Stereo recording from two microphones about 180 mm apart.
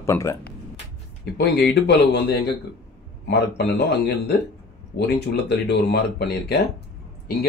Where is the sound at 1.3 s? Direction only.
65° left (ahead or behind).